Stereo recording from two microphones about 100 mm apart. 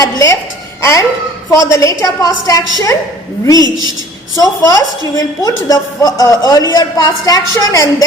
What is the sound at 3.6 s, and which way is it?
Speech, 40° right (ahead or behind).